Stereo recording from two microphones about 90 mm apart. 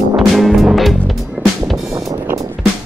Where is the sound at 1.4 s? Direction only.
20° right (ahead or behind).